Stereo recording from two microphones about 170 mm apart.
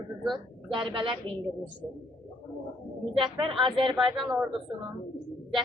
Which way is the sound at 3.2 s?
30° right (ahead or behind).